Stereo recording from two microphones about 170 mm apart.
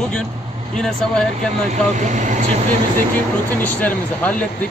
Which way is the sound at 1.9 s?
45° right (ahead or behind).